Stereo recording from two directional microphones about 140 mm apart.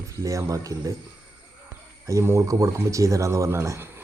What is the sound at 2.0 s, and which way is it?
Speech, 20° right (ahead or behind).